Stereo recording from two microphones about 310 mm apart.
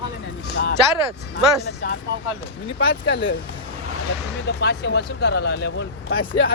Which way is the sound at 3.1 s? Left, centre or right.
Left.